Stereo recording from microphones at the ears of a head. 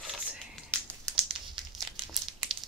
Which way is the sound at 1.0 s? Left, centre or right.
Right.